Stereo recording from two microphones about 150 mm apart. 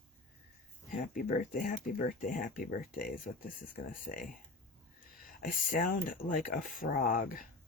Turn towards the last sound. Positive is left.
turn(degrees=65)  # may be behind; listen again after turning